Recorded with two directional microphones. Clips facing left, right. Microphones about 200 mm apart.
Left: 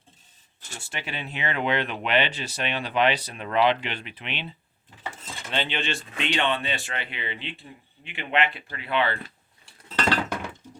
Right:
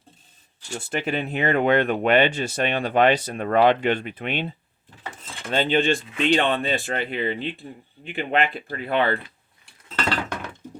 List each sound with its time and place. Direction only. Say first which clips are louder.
0.8 s speech: right 10 dB; 50° right (ahead or behind)